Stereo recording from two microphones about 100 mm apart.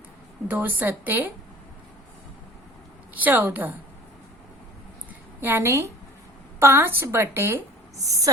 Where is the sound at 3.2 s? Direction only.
15° right (ahead or behind).